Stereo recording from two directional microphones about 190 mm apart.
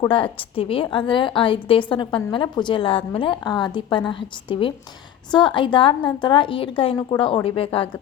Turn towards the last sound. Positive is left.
turn(degrees=30)  # may be behind; listen again after turning